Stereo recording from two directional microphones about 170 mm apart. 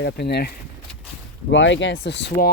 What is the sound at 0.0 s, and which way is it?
Speech, 80° left.